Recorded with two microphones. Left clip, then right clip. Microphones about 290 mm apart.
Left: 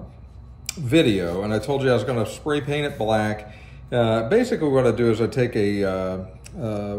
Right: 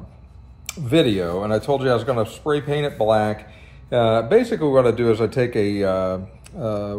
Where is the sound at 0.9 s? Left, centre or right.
Centre.